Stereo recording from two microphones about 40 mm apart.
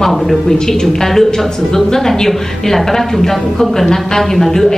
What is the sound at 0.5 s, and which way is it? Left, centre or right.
A woman's voice, centre.